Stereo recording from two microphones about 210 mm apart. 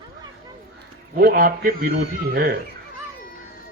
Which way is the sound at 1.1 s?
45° right (ahead or behind).